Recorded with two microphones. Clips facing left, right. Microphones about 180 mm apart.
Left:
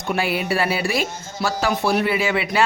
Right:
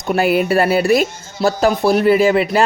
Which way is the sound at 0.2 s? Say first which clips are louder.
Right 9 dB; 50° right (ahead or behind).